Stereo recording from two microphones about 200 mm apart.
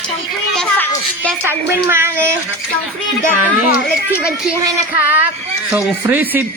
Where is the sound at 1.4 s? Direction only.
10° right (ahead or behind).